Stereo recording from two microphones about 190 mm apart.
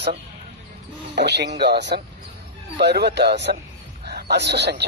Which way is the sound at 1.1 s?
65° right (ahead or behind).